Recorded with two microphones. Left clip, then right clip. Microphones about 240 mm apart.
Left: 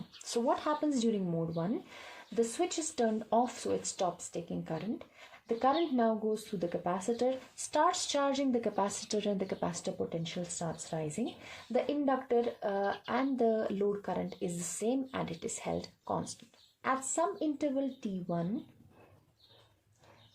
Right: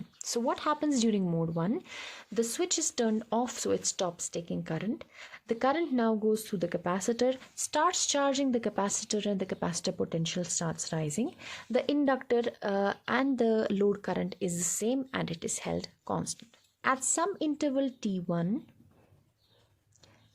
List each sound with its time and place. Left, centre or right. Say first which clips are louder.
0.2 s a woman's voice: even; right